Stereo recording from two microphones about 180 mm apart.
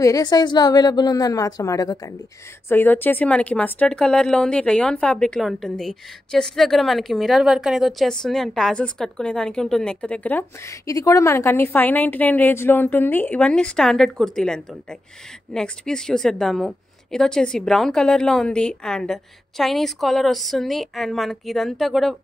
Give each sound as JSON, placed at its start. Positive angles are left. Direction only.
{"t": 0.0, "sound": "a woman's voice", "side_deg": 20}